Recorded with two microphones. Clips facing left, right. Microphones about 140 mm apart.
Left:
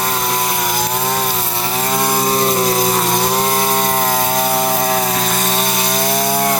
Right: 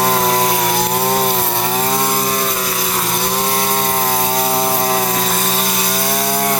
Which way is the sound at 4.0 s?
10° right (ahead or behind).